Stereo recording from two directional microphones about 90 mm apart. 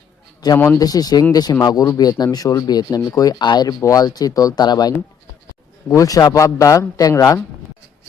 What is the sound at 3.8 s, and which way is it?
Speech, 40° left (ahead or behind).